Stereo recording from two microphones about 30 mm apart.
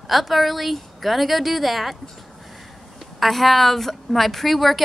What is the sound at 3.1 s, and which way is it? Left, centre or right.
A woman's voice, centre.